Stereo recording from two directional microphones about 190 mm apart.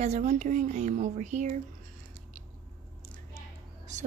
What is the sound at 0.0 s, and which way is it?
Speech, 35° right (ahead or behind).